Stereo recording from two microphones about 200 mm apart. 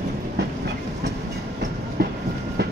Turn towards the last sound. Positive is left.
turn(degrees=-50)  # may be behind; listen again after turning